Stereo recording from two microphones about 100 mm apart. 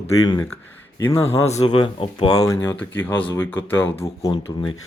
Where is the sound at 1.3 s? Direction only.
85° left; by 2.3 s 65° left (ahead or behind).